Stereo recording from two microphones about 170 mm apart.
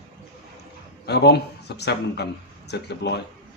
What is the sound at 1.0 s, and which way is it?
Speech, 80° left.